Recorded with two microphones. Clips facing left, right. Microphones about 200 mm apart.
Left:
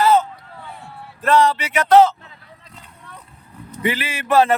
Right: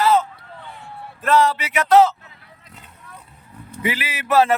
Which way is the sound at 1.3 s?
Centre (ahead or behind).